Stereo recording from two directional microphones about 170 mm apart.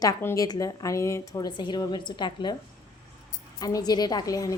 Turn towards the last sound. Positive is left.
turn(degrees=20)  # may be behind; listen again after turning